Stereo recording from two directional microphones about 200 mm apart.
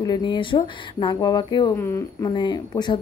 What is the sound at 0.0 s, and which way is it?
Speech, 20° left (ahead or behind).